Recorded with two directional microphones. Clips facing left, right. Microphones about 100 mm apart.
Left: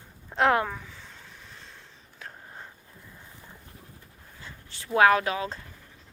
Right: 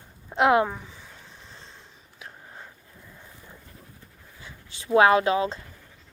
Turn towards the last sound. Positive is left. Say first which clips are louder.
# right 4 dB
turn(degrees=-25)  # may be behind; listen again after turning